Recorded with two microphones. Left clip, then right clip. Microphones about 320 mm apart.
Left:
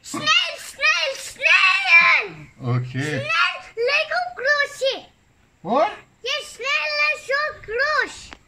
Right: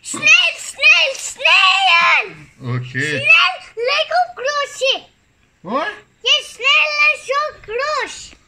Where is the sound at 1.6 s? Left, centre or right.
Centre.